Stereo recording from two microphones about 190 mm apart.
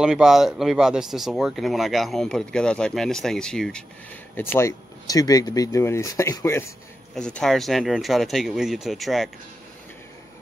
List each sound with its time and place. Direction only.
0.0 s speech: 5° right (ahead or behind); by 6.6 s 15° left (ahead or behind)
7.2 s speech: 5° left (ahead or behind)